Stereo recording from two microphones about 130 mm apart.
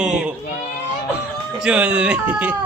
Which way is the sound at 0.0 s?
10° right (ahead or behind).